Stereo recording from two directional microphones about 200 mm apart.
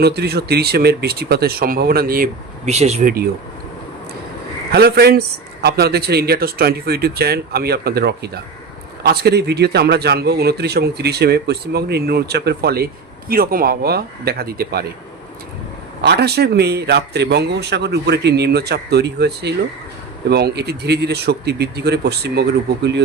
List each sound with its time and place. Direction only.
0.0 s a man's voice: 55° right (ahead or behind); by 3.1 s 35° right (ahead or behind)
4.7 s a man's voice: 50° right (ahead or behind)
16.0 s a man's voice: 55° right (ahead or behind)